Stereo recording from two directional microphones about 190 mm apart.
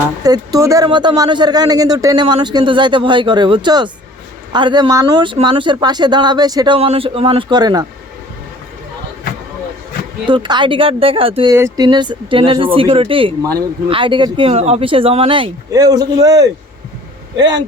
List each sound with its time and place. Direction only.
0.2 s speech: 20° right (ahead or behind)
6.7 s speech: 30° right (ahead or behind)
10.2 s speech: 25° right (ahead or behind)
11.5 s speech: 15° right (ahead or behind)